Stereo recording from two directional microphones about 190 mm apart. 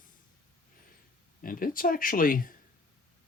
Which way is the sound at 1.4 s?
50° left (ahead or behind).